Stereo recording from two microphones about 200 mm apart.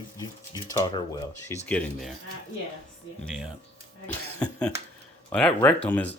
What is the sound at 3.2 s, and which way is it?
Speech, centre (ahead or behind).